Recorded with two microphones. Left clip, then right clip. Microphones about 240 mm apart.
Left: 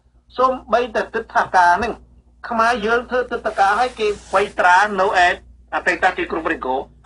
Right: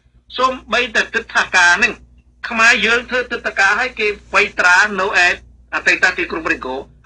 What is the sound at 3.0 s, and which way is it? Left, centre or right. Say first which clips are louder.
Speech: right 1 dB; right.